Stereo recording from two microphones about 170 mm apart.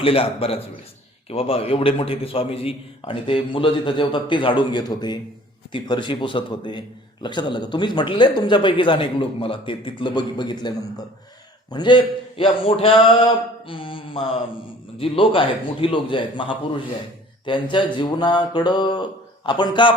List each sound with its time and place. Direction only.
0.0 s a man's voice: 35° left (ahead or behind)